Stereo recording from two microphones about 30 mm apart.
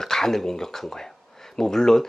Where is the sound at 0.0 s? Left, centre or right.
Centre.